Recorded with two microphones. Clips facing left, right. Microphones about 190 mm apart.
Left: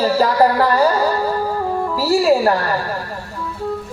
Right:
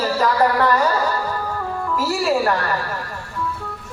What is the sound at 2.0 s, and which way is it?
Speech, 35° left (ahead or behind).